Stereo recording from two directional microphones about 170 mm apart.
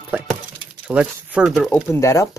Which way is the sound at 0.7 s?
10° right (ahead or behind).